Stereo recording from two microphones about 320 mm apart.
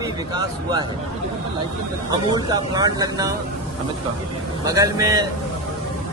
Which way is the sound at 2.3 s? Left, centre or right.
Centre.